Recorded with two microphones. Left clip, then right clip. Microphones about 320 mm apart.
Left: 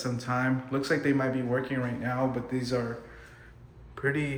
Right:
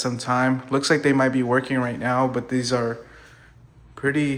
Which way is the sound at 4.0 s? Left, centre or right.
Centre.